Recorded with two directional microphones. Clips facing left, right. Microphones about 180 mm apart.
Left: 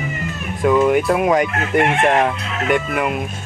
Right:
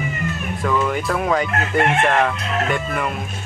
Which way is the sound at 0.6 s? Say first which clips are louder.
Left 7 dB; 15° left (ahead or behind).